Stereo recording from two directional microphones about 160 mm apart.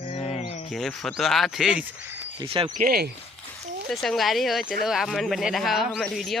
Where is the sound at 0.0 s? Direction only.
40° left (ahead or behind).